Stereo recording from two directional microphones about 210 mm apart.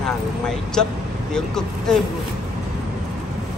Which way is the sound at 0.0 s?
Centre (ahead or behind).